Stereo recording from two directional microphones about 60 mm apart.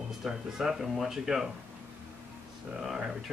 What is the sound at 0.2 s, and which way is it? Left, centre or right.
Speech, centre.